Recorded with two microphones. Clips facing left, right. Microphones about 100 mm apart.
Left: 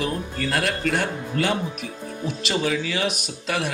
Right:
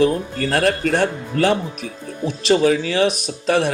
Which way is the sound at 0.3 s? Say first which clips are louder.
Right 6 dB; 40° right (ahead or behind).